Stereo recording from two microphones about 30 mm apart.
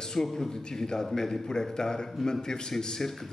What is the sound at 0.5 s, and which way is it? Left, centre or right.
A man's voice, left.